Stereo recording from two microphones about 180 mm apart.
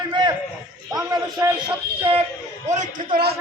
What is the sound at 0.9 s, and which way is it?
A man's voice, 20° right (ahead or behind).